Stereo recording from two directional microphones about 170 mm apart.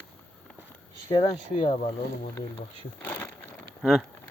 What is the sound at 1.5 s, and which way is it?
Speech, 50° left (ahead or behind).